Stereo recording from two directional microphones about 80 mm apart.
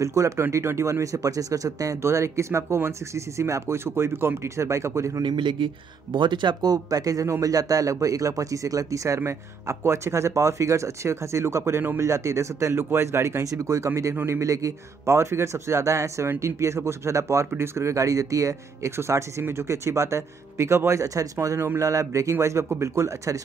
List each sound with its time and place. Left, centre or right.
0.0 s speech: right
5.2 s speech: right